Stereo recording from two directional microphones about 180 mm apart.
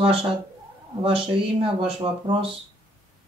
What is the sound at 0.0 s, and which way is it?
Speech, 30° right (ahead or behind).